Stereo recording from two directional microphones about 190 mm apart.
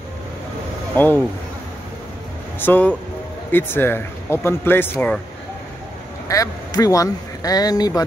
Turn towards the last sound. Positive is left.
turn(degrees=20)  # may be behind; listen again after turning